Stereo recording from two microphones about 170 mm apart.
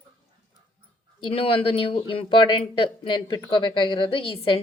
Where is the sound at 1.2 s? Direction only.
35° left (ahead or behind).